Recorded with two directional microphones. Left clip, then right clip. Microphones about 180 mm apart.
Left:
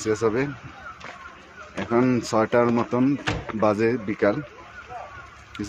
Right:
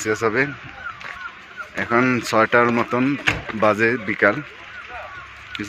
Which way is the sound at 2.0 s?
10° left (ahead or behind).